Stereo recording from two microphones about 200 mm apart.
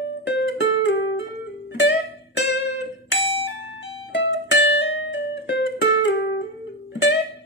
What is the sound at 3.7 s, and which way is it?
Music, 75° left (ahead or behind).